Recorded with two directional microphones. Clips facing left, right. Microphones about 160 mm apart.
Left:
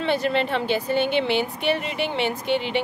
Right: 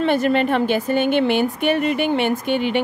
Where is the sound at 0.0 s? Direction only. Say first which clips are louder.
Right 5 dB; 50° right (ahead or behind).